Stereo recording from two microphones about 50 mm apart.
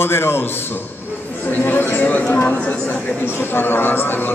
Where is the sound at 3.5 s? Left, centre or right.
Left.